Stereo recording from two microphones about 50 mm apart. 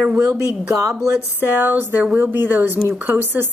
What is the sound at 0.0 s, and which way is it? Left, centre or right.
Speech, right.